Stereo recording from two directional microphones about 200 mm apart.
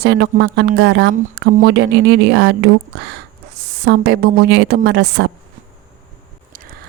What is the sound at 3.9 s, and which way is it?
A woman's voice, 55° right (ahead or behind).